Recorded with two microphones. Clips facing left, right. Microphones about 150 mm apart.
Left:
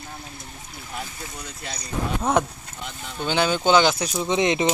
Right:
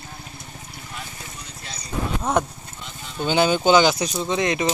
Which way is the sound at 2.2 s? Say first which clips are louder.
Left 1 dB; centre (ahead or behind).